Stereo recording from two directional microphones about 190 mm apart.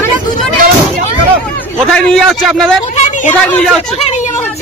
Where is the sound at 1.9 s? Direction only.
5° left (ahead or behind).